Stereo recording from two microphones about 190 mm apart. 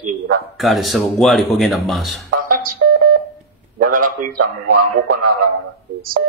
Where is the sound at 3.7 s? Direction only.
45° right (ahead or behind).